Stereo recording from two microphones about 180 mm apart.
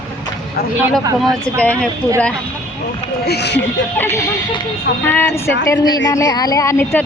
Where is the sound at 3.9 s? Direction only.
15° left (ahead or behind).